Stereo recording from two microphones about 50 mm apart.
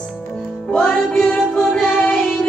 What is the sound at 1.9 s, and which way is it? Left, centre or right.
Music, left.